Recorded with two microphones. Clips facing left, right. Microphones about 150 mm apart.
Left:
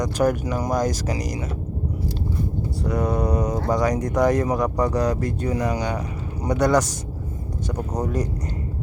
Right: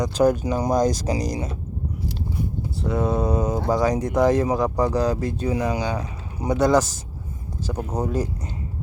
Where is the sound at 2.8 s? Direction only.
25° right (ahead or behind).